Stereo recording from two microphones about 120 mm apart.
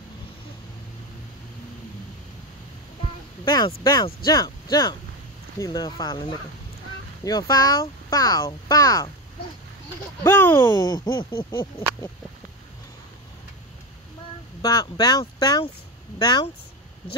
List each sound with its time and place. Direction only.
3.4 s speech: 35° left (ahead or behind)
10.2 s speech: 20° left (ahead or behind)
10.6 s speech: 30° left (ahead or behind)
14.6 s speech: 30° left (ahead or behind)